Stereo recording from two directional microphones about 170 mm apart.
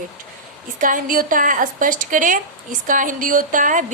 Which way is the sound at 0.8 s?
55° right (ahead or behind).